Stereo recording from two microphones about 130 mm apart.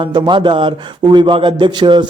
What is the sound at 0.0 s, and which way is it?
A man's voice, 35° right (ahead or behind).